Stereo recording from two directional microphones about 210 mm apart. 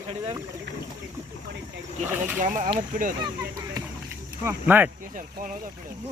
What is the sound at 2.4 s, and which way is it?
Speech, 35° right (ahead or behind).